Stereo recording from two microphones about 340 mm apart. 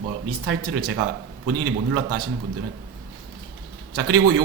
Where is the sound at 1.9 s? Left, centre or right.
Right.